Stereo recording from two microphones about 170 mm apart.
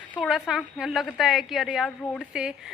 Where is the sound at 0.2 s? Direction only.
5° right (ahead or behind).